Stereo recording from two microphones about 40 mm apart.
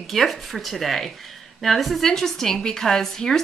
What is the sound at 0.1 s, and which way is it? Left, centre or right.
Speech, centre.